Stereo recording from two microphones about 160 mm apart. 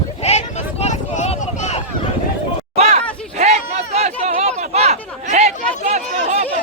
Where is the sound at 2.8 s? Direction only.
40° right (ahead or behind).